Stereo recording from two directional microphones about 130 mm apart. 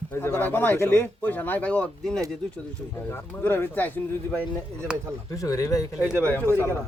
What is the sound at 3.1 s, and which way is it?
Speech, 15° left (ahead or behind).